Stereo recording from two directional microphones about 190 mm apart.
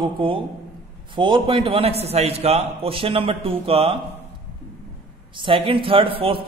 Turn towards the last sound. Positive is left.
turn(degrees=-30)  # may be behind; listen again after turning